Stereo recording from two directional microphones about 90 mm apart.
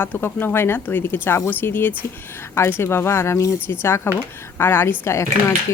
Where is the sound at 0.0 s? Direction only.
25° left (ahead or behind).